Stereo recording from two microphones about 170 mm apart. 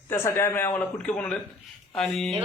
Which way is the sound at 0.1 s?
15° left (ahead or behind).